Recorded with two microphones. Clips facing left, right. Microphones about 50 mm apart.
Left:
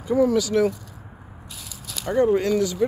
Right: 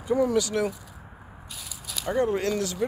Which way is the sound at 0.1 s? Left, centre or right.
Centre.